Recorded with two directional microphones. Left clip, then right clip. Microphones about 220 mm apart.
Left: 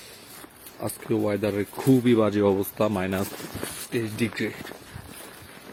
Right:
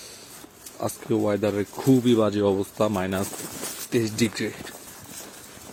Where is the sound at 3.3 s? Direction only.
35° right (ahead or behind).